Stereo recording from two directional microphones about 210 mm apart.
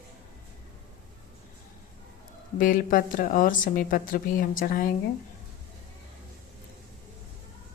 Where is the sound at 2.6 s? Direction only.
40° left (ahead or behind).